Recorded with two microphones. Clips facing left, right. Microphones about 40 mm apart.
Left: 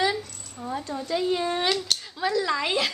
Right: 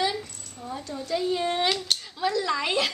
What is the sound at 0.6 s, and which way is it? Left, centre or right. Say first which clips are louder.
Speech: left 3 dB; left.